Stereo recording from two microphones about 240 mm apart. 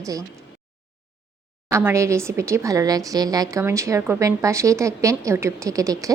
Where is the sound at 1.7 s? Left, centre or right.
Centre.